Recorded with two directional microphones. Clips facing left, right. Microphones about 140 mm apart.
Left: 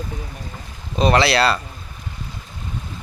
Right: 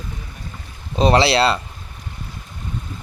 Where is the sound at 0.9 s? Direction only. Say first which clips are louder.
Right 1 dB; 30° right (ahead or behind).